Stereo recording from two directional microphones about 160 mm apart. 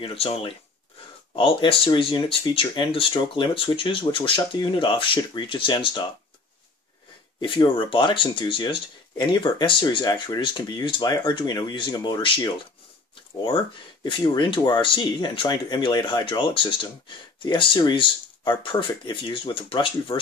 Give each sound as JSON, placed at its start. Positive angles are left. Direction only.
{"t": 0.0, "sound": "speech", "side_deg": 35}
{"t": 7.3, "sound": "speech", "side_deg": 30}
{"t": 13.1, "sound": "a sound", "side_deg": 30}
{"t": 14.0, "sound": "speech", "side_deg": 30}